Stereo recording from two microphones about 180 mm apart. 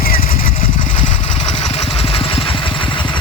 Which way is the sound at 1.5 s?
35° left (ahead or behind).